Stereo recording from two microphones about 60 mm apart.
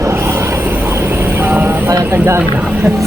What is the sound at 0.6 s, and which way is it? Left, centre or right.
Vehicle, right.